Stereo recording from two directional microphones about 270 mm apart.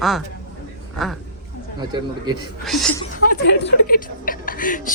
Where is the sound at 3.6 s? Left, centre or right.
Left.